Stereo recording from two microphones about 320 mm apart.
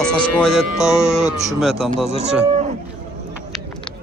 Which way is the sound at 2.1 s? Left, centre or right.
Centre.